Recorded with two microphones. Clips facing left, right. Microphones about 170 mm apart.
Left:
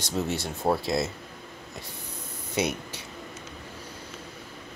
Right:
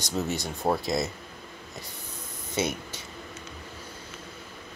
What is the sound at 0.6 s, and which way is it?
Speech, centre (ahead or behind).